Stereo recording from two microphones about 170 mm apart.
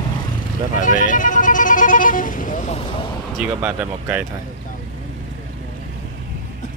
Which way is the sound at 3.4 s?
10° right (ahead or behind).